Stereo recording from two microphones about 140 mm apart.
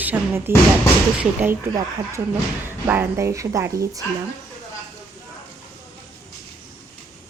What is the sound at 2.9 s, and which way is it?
A woman's voice, 15° right (ahead or behind).